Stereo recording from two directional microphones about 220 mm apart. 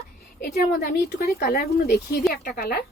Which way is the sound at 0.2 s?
45° left (ahead or behind).